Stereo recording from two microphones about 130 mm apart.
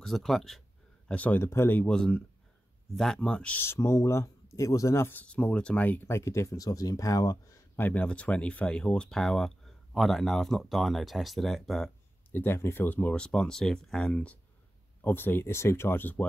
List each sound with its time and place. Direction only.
0.0 s speech: centre (ahead or behind); by 7.3 s 30° left (ahead or behind)
7.7 s speech: 15° left (ahead or behind)
12.3 s speech: 15° left (ahead or behind)